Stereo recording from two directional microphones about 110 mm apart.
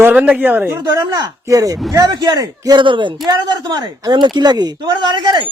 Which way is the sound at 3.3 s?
35° right (ahead or behind).